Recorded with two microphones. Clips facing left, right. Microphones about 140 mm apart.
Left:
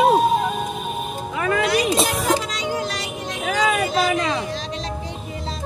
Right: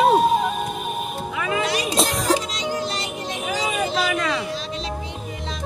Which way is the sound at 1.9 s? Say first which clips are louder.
Left 1 dB; centre (ahead or behind).